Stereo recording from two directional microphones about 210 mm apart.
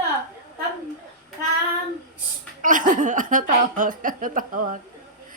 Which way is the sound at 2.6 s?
40° right (ahead or behind).